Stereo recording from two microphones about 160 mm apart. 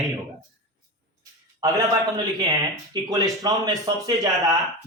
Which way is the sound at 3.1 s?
20° right (ahead or behind).